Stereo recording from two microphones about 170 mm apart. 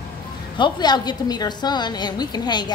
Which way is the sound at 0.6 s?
25° left (ahead or behind).